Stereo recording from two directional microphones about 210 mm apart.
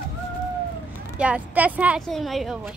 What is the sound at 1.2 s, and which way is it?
A woman's voice, 5° right (ahead or behind).